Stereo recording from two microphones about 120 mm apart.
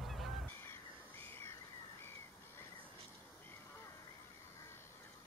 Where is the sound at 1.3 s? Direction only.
20° left (ahead or behind).